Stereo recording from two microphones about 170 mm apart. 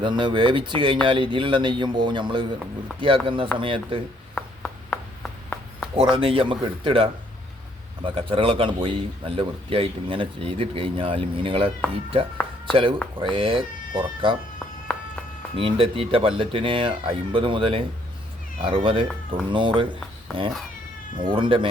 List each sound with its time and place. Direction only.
0.0 s a man's voice: 25° right (ahead or behind)
4.4 s a sound: 5° left (ahead or behind)
6.0 s a man's voice: 30° right (ahead or behind)
13.1 s speech: 30° right (ahead or behind)
14.9 s a sound: 5° left (ahead or behind)
15.5 s a man's voice: 30° right (ahead or behind)
21.2 s speech: 30° right (ahead or behind)